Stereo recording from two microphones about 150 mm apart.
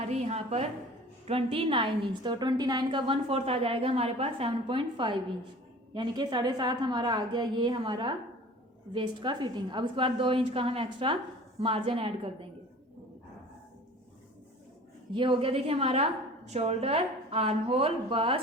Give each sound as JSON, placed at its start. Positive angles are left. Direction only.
{"t": 0.1, "sound": "a sound", "side_deg": -45}
{"t": 1.3, "sound": "a woman's voice", "side_deg": -40}
{"t": 15.1, "sound": "a woman's voice", "side_deg": -35}